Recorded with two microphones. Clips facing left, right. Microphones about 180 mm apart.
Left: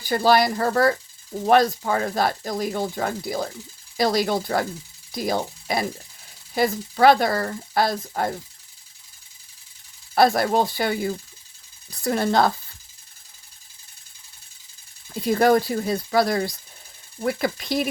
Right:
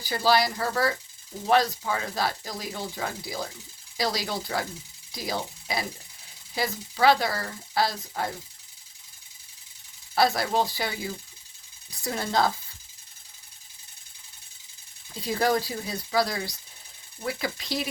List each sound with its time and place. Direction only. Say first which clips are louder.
0.0 s speech: left 5 dB; 50° left (ahead or behind)
10.2 s speech: left 5 dB; 55° left (ahead or behind)
15.3 s speech: left 7 dB; 55° left (ahead or behind)